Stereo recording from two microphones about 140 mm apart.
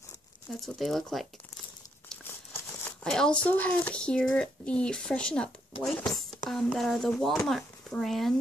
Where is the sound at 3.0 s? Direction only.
5° left (ahead or behind).